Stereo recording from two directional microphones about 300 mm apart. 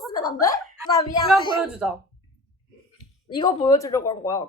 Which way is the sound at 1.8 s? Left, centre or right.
Centre.